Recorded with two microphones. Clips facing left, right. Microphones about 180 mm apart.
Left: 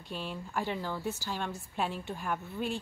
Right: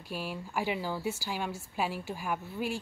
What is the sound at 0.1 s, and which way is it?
A woman's voice, 5° right (ahead or behind).